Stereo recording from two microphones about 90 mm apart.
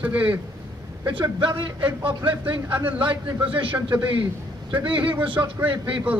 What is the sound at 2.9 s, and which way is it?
Speech, 70° right (ahead or behind).